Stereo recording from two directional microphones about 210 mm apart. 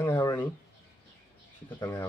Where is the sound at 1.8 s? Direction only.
15° left (ahead or behind).